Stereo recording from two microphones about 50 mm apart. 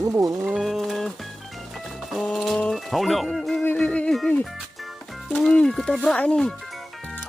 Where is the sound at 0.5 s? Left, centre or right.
Centre.